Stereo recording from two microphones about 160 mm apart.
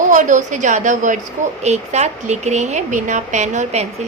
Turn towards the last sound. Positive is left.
turn(degrees=-45)  # may be behind; listen again after turning